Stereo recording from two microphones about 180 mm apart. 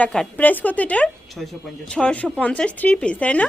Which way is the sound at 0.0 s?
5° left (ahead or behind).